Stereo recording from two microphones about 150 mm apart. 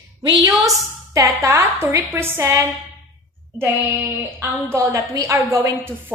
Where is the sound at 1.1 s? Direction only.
20° right (ahead or behind).